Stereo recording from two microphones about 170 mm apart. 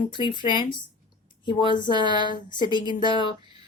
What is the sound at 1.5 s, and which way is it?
A woman's voice, 30° left (ahead or behind).